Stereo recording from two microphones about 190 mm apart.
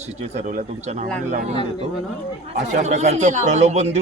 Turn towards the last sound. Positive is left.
turn(degrees=-35)  # may be behind; listen again after turning